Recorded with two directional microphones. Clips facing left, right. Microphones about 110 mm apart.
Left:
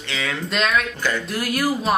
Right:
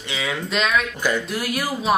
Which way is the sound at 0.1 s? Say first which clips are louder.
Even; 15° right (ahead or behind).